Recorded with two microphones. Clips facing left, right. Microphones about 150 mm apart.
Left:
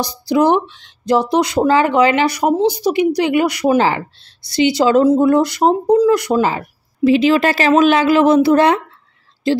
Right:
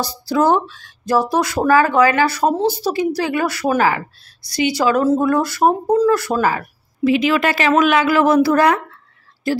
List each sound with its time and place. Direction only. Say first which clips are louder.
0.0 s speech: left 2 dB; 15° left (ahead or behind)